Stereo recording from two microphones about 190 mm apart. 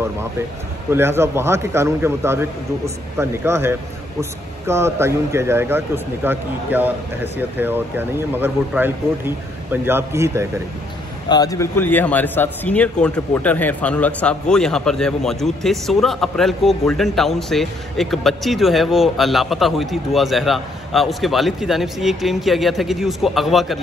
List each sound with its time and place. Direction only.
0.8 s speech: 10° right (ahead or behind)
11.2 s a man's voice: 20° left (ahead or behind); by 23.8 s centre (ahead or behind)